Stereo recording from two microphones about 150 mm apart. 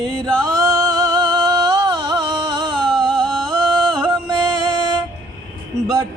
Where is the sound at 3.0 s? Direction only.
5° left (ahead or behind).